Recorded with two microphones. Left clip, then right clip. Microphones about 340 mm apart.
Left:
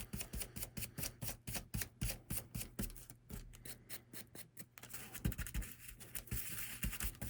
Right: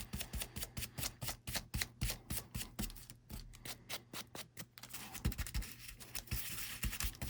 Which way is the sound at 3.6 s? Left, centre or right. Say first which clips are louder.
Right 12 dB; centre.